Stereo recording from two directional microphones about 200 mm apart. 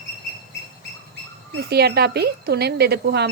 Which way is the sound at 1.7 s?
55° right (ahead or behind).